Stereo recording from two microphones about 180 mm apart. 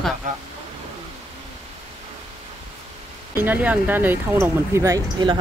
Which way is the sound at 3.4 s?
10° right (ahead or behind).